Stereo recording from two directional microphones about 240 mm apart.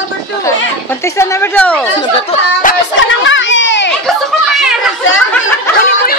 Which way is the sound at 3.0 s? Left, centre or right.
Left.